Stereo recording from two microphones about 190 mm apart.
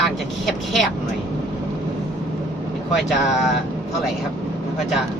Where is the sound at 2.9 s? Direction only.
Centre (ahead or behind).